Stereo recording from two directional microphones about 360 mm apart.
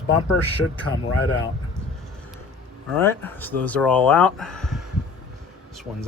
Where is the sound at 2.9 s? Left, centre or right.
Centre.